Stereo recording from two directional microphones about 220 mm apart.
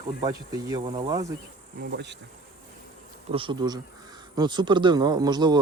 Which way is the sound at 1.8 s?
50° right (ahead or behind).